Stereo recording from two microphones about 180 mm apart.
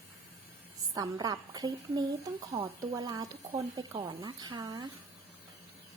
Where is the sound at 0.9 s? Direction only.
20° right (ahead or behind).